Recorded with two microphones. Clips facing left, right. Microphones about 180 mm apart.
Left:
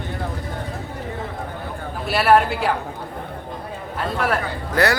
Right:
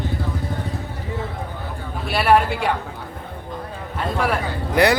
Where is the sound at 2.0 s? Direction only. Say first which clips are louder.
Left 1 dB; centre (ahead or behind).